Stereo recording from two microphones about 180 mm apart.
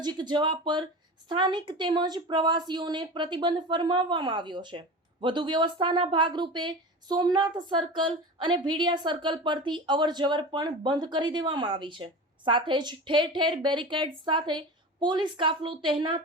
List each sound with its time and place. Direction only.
0.0 s speech: 25° right (ahead or behind)